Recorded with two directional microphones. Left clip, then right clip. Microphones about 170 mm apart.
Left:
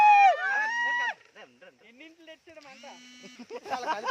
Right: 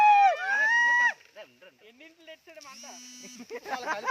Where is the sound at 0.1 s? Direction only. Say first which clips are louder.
Left 1 dB; 10° left (ahead or behind).